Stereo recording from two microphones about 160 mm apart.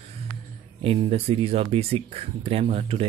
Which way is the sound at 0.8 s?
35° right (ahead or behind).